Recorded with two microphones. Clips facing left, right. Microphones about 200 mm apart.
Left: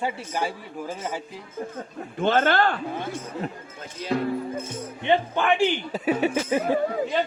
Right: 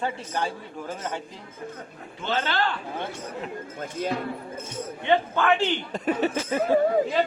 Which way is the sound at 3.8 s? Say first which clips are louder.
Right 7 dB; 50° right (ahead or behind).